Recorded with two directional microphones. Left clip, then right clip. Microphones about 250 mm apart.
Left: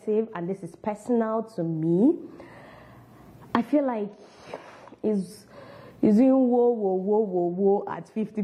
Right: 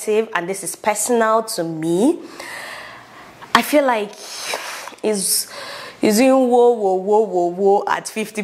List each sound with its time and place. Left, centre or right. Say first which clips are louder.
0.0 s speech: right 8 dB; centre
1.9 s speech: right 5 dB; right
3.5 s a sound: right 10 dB; centre
6.4 s speech: right 8 dB; right
7.9 s speech: right 12 dB; centre